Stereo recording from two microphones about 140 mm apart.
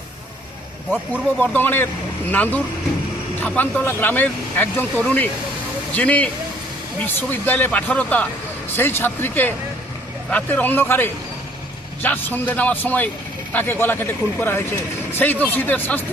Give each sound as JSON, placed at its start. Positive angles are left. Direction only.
{"t": 1.4, "sound": "speech", "side_deg": 15}